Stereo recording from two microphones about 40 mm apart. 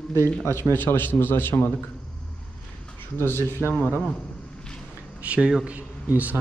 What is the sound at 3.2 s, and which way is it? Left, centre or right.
Speech, left.